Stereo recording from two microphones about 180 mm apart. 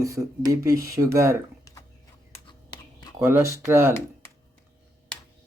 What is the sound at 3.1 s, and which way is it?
Speech, 15° right (ahead or behind).